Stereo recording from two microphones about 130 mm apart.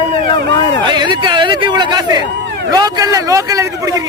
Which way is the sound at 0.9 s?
35° right (ahead or behind).